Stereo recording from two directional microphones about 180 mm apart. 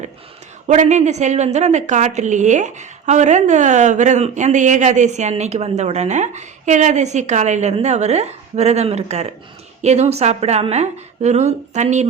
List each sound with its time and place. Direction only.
0.7 s a woman's voice: 40° right (ahead or behind)